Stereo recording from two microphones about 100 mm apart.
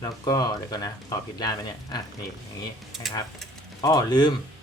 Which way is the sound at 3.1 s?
5° right (ahead or behind).